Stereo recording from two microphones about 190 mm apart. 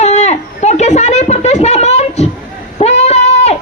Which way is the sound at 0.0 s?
35° left (ahead or behind).